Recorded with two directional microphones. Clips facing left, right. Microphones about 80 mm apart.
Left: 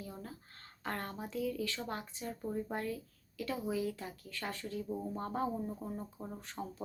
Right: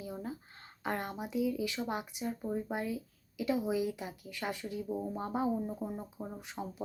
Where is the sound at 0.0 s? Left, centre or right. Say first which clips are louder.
Right 6 dB; centre.